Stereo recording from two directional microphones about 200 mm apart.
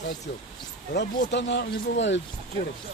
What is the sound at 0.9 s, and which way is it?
Speech, 60° left (ahead or behind).